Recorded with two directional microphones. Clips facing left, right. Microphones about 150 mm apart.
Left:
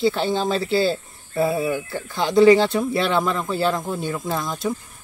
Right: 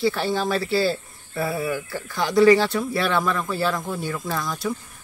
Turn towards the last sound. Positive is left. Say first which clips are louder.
# left 2 dB
turn(degrees=20)  # may be behind; listen again after turning